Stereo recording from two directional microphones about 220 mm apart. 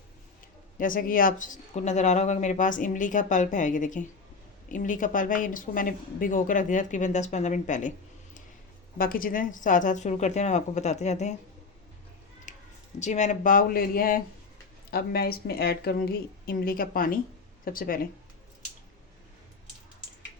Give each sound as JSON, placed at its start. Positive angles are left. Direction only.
{"t": 0.8, "sound": "speech", "side_deg": 40}
{"t": 12.5, "sound": "a sound", "side_deg": 35}
{"t": 13.0, "sound": "speech", "side_deg": 30}